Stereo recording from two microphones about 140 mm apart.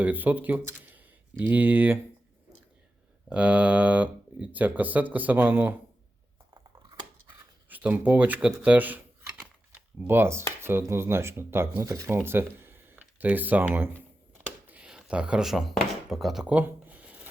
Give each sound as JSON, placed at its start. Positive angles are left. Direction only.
{"t": 0.0, "sound": "speech", "side_deg": -10}
{"t": 3.2, "sound": "speech", "side_deg": -10}
{"t": 6.5, "sound": "scissors", "side_deg": -35}
{"t": 7.7, "sound": "a sound", "side_deg": -10}
{"t": 10.1, "sound": "speech", "side_deg": -15}
{"t": 14.4, "sound": "chopping", "side_deg": -10}